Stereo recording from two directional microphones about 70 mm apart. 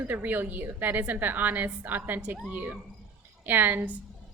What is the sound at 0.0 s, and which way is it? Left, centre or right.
A woman's voice, right.